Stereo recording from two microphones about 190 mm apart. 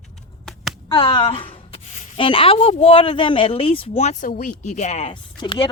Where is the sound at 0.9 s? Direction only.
20° left (ahead or behind).